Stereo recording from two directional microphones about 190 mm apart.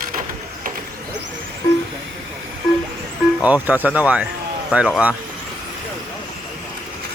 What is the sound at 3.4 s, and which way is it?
Speech, 10° right (ahead or behind).